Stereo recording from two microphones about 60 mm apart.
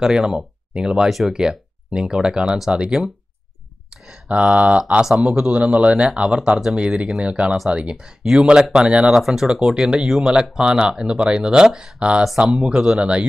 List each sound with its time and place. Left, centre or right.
0.0 s speech: centre
3.9 s a sound: centre
4.3 s speech: right
5.0 s speech: centre
5.5 s speech: right
12.3 s speech: centre
12.5 s speech: centre